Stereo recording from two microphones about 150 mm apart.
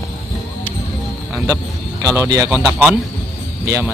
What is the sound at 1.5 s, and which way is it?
Speech, 20° right (ahead or behind).